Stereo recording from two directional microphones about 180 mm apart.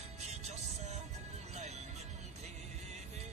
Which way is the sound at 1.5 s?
40° right (ahead or behind).